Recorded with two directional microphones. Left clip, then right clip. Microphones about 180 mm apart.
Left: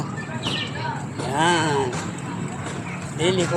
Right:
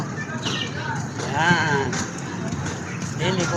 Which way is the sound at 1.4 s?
45° left (ahead or behind).